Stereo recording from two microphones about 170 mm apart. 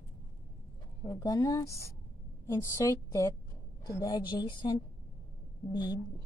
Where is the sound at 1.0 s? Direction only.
20° left (ahead or behind).